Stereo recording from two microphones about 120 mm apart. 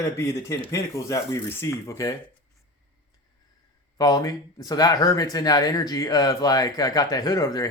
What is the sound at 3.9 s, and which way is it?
Speech, 30° left (ahead or behind).